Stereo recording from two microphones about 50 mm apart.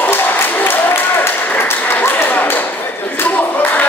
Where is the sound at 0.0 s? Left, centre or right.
Left.